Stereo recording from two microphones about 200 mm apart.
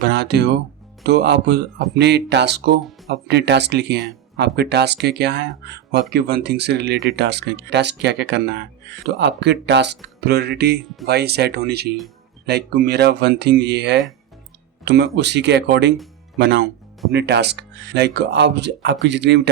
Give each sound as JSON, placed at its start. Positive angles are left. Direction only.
{"t": 0.0, "sound": "speech", "side_deg": -55}